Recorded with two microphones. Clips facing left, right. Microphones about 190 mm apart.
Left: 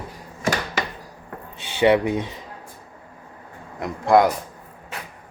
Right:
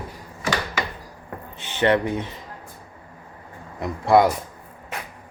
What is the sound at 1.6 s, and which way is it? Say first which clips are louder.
Speech: left 3 dB; 10° left (ahead or behind).